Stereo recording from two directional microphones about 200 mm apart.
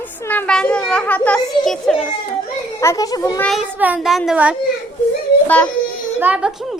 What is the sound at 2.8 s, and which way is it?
Speech, 15° left (ahead or behind).